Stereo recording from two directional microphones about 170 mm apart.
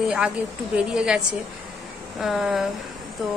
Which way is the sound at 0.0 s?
5° right (ahead or behind).